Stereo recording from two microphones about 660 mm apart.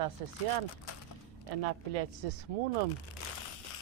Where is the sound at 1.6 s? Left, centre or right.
Right.